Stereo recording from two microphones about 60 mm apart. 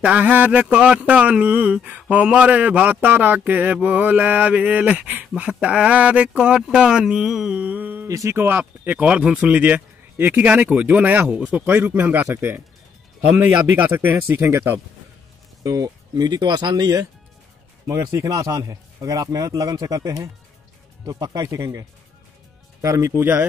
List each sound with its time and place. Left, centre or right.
0.0 s speech: right
0.7 s speech: centre
7.6 s a sound: right
8.1 s speech: right
8.4 s speech: right
13.8 s speech: right
15.6 s speech: right
17.8 s a man's voice: right
22.8 s speech: right